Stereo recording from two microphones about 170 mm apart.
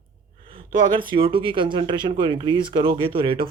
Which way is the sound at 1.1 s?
30° right (ahead or behind).